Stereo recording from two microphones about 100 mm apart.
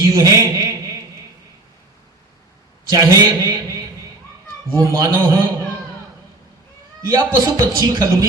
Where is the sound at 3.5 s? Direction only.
40° right (ahead or behind).